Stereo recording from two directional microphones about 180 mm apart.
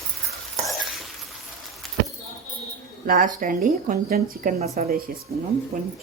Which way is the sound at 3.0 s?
50° right (ahead or behind).